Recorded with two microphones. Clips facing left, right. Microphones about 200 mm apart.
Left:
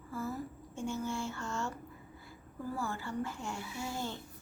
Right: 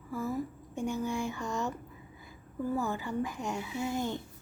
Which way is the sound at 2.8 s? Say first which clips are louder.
Right 3 dB; 20° right (ahead or behind).